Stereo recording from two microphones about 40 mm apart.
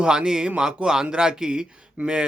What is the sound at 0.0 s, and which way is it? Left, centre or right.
Speech, right.